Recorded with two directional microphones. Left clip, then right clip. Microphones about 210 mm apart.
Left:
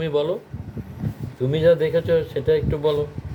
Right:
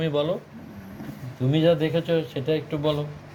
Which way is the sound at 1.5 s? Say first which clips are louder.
Left 4 dB; 25° left (ahead or behind).